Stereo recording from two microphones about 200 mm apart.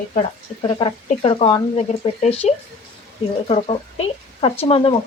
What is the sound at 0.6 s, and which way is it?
Speech, 25° left (ahead or behind).